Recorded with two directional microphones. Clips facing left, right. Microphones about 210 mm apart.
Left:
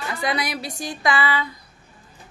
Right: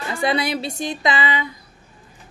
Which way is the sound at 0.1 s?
30° right (ahead or behind).